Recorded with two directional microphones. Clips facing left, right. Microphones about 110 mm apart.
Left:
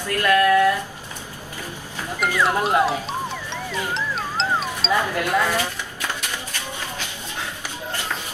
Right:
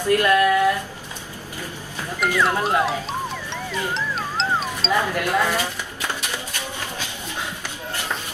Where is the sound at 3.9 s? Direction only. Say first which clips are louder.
Even; centre (ahead or behind).